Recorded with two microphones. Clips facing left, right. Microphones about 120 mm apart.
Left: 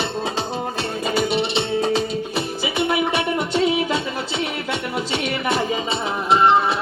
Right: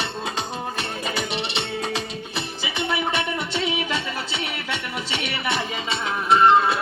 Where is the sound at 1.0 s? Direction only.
40° left (ahead or behind).